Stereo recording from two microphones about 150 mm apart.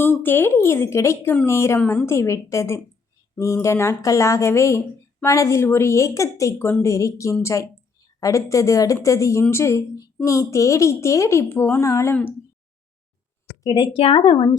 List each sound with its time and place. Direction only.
0.0 s speech: 15° left (ahead or behind)
1.8 s speech: 5° left (ahead or behind)
2.0 s a woman's voice: 20° left (ahead or behind)
13.7 s a woman's voice: 25° left (ahead or behind)
13.9 s a woman's voice: 40° left (ahead or behind)